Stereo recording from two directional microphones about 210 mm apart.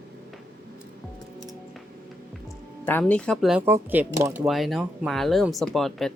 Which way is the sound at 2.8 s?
5° left (ahead or behind).